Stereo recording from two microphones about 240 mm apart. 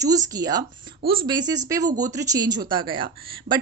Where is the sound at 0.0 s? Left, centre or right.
Centre.